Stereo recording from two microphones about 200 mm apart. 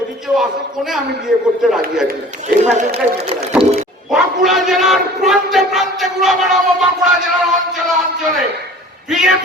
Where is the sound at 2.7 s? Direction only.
35° right (ahead or behind).